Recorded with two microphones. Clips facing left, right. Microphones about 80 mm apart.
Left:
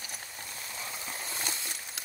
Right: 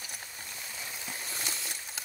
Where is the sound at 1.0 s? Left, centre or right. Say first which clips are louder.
Left 1 dB; left.